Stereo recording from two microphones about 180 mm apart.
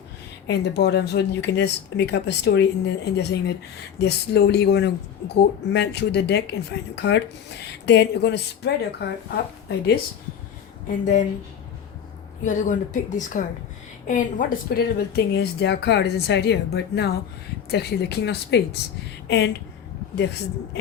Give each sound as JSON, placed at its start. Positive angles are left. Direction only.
{"t": 0.4, "sound": "speech", "side_deg": 65}
{"t": 10.8, "sound": "a woman's voice", "side_deg": 45}
{"t": 12.4, "sound": "a woman's voice", "side_deg": 45}